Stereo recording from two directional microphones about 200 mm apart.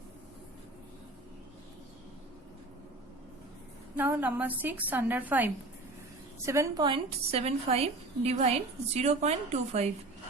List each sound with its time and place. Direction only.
3.9 s a woman's voice: 10° right (ahead or behind); by 9.9 s 35° right (ahead or behind)